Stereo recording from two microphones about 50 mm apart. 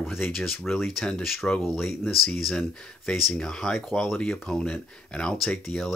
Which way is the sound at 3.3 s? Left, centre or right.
Centre.